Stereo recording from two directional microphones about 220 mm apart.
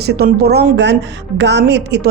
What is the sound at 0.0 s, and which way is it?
Speech, 45° right (ahead or behind).